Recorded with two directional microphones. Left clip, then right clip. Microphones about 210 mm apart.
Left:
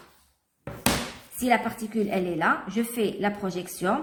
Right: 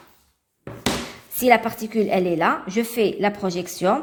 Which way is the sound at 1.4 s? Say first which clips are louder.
Right 7 dB; 35° right (ahead or behind).